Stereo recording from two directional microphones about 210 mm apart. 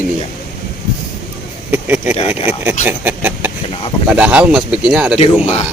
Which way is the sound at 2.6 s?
10° right (ahead or behind).